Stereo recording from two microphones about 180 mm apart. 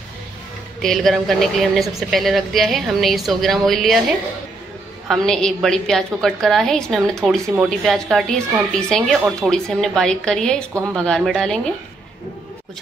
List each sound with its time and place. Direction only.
0.8 s a woman's voice: centre (ahead or behind)
5.0 s a woman's voice: centre (ahead or behind)
10.7 s speech: 15° right (ahead or behind)
11.0 s a woman's voice: centre (ahead or behind)